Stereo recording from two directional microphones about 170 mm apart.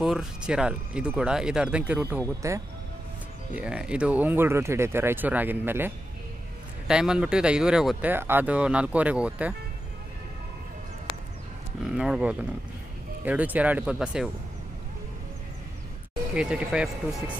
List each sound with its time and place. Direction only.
0.0 s speech: centre (ahead or behind); by 2.6 s 15° right (ahead or behind)
3.5 s speech: 5° right (ahead or behind)
11.8 s speech: 5° right (ahead or behind)
16.3 s speech: 5° right (ahead or behind)